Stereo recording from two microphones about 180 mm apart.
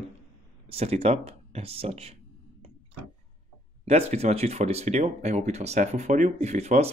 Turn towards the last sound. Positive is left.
turn(degrees=-40)  # may be behind; listen again after turning